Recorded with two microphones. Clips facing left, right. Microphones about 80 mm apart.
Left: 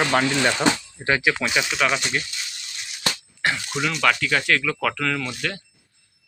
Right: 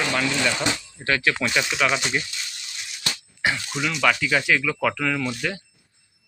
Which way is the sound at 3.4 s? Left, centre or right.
Centre.